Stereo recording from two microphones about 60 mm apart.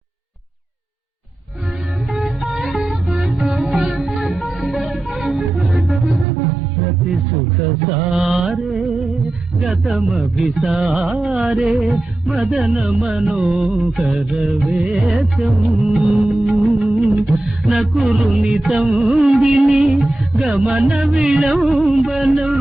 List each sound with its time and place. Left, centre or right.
2.0 s music: centre
7.6 s mantra: centre
9.6 s music: centre
17.2 s mantra: centre
18.9 s music: centre